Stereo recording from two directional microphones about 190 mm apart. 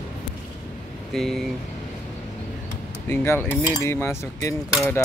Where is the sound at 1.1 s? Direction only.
Centre (ahead or behind).